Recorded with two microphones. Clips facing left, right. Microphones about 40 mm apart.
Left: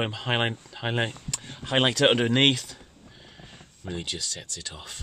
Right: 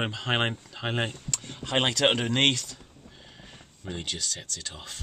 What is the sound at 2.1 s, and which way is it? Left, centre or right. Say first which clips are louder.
Speech: left 3 dB; centre.